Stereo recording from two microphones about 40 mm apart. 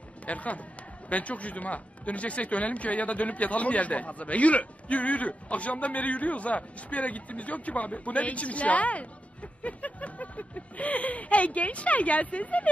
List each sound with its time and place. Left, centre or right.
0.3 s speech: left